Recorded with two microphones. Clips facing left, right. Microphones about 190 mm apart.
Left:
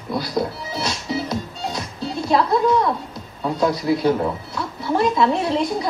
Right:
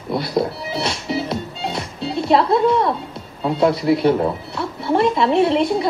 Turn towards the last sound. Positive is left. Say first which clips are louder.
# right 4 dB
turn(degrees=-25)  # may be behind; listen again after turning